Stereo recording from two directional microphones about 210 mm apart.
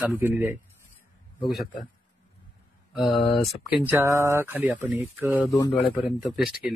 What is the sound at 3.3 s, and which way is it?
Speech, centre (ahead or behind).